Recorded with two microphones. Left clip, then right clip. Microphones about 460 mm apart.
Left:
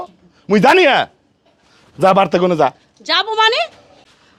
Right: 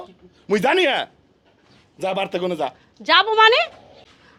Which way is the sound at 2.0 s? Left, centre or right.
Left.